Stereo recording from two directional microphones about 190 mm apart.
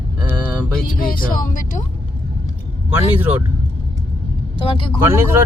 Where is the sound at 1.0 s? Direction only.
50° left (ahead or behind).